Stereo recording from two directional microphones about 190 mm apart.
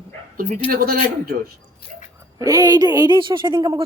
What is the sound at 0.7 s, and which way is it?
Speech, 50° right (ahead or behind).